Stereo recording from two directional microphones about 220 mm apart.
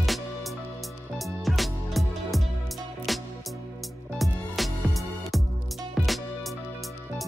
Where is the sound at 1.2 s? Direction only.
Centre (ahead or behind).